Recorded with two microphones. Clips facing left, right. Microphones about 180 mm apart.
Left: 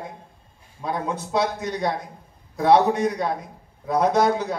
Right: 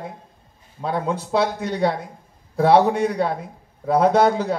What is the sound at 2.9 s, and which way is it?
A man's voice, 60° right (ahead or behind).